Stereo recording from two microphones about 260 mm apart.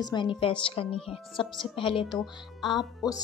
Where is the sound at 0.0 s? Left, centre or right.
Centre.